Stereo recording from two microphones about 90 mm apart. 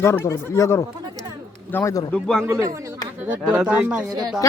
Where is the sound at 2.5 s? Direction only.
30° right (ahead or behind).